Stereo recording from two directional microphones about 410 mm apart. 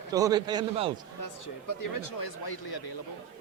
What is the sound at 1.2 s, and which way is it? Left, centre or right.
Speech, left.